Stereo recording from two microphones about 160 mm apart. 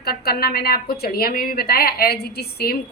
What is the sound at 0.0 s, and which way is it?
A woman's voice, 75° left (ahead or behind).